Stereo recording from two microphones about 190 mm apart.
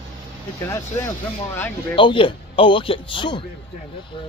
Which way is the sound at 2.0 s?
25° left (ahead or behind).